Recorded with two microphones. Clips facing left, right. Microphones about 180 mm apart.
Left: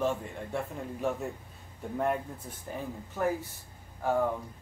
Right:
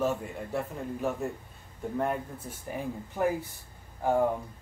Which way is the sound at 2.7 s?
15° right (ahead or behind).